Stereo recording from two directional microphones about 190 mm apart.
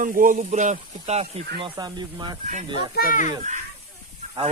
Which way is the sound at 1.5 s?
25° right (ahead or behind).